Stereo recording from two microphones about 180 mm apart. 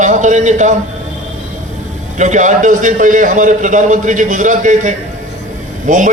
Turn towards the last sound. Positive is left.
turn(degrees=-45)  # may be behind; listen again after turning